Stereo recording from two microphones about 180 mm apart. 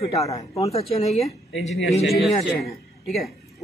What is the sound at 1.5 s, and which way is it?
Speech, 90° left.